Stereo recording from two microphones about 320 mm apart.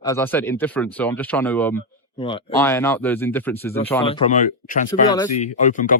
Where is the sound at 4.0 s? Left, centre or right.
Centre.